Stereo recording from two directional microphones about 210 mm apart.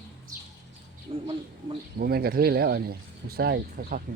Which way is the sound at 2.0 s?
45° right (ahead or behind).